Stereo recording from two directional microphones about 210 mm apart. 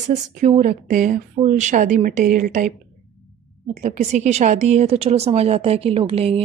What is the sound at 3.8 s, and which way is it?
A woman's voice, 35° right (ahead or behind).